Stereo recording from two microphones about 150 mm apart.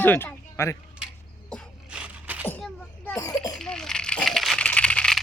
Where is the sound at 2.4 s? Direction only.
10° left (ahead or behind).